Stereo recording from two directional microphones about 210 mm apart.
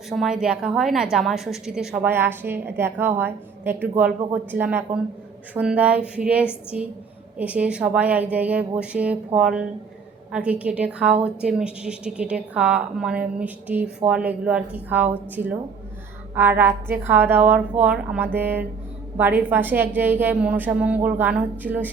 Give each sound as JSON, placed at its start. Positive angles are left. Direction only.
{"t": 0.1, "sound": "a woman's voice", "side_deg": 0}